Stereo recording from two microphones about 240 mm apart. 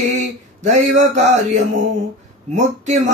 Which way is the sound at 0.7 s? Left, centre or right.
Right.